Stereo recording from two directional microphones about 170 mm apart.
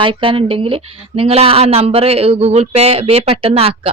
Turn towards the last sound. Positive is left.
turn(degrees=-35)  # may be behind; listen again after turning